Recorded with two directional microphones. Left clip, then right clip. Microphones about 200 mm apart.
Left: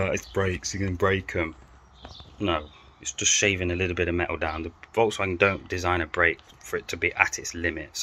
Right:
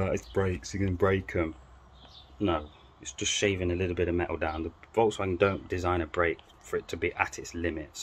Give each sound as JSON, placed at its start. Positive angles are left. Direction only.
{"t": 0.0, "sound": "speech", "side_deg": -10}
{"t": 7.2, "sound": "speech", "side_deg": -70}
{"t": 7.5, "sound": "speech", "side_deg": -5}